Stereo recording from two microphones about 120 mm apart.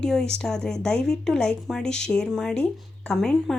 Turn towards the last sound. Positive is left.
turn(degrees=5)  # may be behind; listen again after turning